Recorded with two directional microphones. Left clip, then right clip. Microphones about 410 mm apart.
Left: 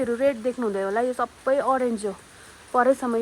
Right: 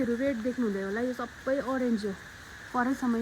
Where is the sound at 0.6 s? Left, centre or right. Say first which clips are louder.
Left 9 dB; left.